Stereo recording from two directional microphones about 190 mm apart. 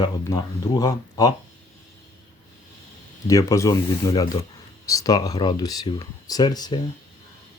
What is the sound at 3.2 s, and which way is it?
Speech, 15° left (ahead or behind).